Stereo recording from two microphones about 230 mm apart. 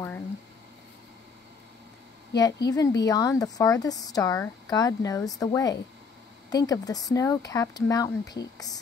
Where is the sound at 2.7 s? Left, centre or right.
Centre.